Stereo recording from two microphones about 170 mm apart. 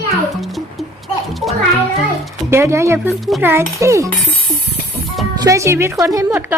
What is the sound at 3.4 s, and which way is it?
Speech, 15° right (ahead or behind).